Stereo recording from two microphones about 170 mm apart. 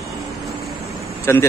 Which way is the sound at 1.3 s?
15° left (ahead or behind).